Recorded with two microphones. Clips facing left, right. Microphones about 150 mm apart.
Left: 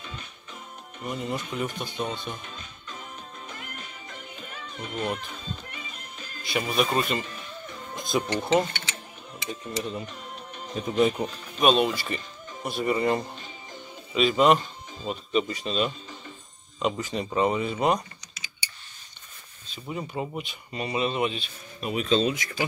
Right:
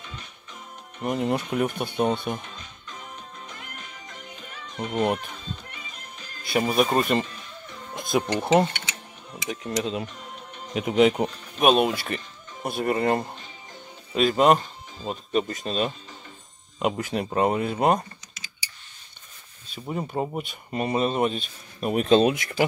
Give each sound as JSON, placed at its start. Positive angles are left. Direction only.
{"t": 1.0, "sound": "speech", "side_deg": -60}
{"t": 4.9, "sound": "speech", "side_deg": -60}
{"t": 6.4, "sound": "speech", "side_deg": -50}
{"t": 7.9, "sound": "speech", "side_deg": -60}
{"t": 9.5, "sound": "speech", "side_deg": -90}
{"t": 11.6, "sound": "speech", "side_deg": -55}
{"t": 16.8, "sound": "speech", "side_deg": -60}
{"t": 19.7, "sound": "speech", "side_deg": -45}